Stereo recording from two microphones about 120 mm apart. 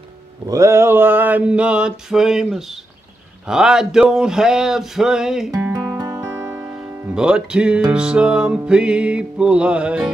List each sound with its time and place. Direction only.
0.5 s mantra: 25° right (ahead or behind); by 2.8 s 5° right (ahead or behind)
3.4 s a sound: 5° right (ahead or behind)
5.6 s music: 10° right (ahead or behind)
5.9 s music: 25° right (ahead or behind)
6.2 s music: 15° right (ahead or behind)
7.2 s mantra: 5° right (ahead or behind)